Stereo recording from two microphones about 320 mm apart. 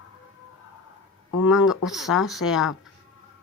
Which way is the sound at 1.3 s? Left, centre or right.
Left.